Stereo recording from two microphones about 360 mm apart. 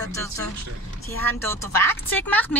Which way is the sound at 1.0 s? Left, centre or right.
Centre.